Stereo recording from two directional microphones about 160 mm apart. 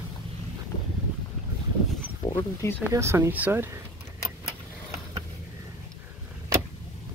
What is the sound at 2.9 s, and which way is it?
Speech, 20° right (ahead or behind).